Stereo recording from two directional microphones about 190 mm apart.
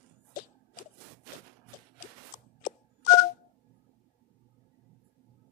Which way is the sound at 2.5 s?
40° left (ahead or behind).